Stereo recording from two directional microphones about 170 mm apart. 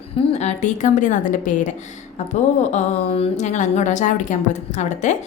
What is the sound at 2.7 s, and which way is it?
A woman's voice, 35° left (ahead or behind).